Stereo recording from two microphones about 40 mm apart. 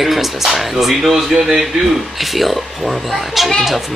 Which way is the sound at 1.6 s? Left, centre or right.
Centre.